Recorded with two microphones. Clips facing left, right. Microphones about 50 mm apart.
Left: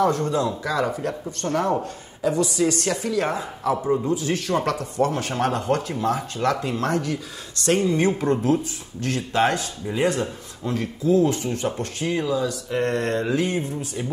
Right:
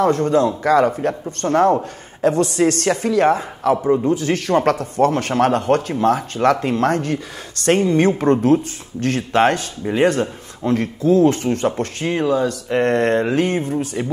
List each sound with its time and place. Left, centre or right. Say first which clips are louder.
0.0 s speech: right 5 dB; right
3.8 s speech: right 6 dB; right
4.1 s speech: right 6 dB; right